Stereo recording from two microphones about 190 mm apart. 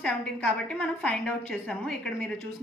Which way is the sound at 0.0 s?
5° left (ahead or behind).